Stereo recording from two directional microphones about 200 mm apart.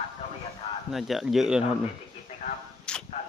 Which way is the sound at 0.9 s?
Centre (ahead or behind).